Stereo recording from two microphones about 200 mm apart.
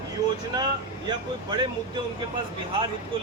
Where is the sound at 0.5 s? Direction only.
20° right (ahead or behind).